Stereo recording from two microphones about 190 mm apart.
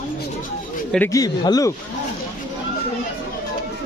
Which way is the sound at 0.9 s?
10° left (ahead or behind).